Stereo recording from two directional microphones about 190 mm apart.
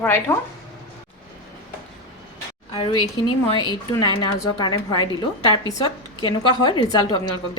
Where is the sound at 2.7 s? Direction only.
25° left (ahead or behind).